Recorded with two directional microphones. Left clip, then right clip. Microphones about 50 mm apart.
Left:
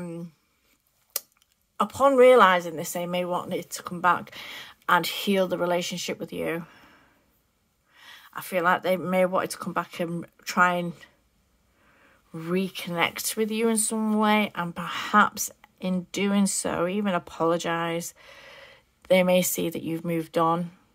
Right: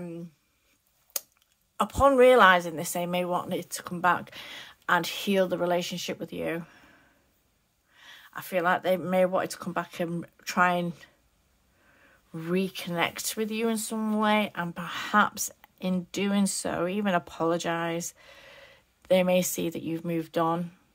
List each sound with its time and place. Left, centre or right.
1.1 s a sound: left
1.8 s speech: centre
4.6 s speech: left
10.5 s speech: centre
11.9 s speech: centre
16.5 s speech: left
17.0 s speech: centre
17.3 s speech: left